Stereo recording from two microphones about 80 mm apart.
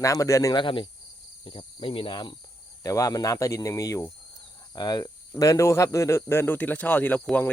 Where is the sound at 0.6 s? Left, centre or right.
Left.